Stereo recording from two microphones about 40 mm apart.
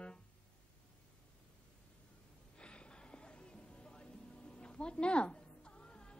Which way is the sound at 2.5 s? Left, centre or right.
Left.